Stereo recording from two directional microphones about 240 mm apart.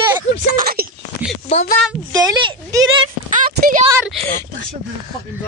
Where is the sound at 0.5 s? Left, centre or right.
Right.